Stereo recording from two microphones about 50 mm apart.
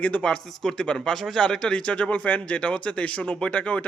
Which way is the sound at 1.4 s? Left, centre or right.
Centre.